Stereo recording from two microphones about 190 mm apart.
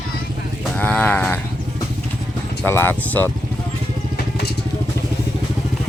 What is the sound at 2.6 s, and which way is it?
Speech, 10° left (ahead or behind).